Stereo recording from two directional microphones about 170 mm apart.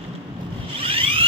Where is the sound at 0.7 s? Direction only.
30° right (ahead or behind).